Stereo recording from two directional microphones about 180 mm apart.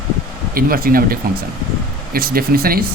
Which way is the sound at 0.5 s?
55° right (ahead or behind).